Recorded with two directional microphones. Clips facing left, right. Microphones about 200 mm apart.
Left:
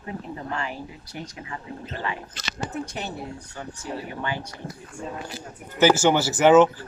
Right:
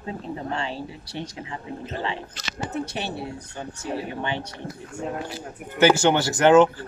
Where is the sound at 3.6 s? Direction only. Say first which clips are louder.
Right 3 dB; 25° right (ahead or behind).